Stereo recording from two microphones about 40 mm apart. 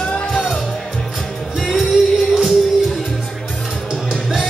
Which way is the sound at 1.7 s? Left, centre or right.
Centre.